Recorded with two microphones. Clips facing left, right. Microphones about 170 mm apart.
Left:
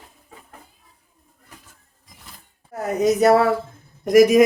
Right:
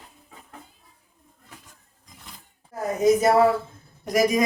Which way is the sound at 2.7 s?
70° left (ahead or behind).